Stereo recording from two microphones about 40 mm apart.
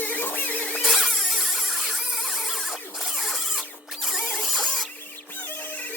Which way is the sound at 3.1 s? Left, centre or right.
Centre.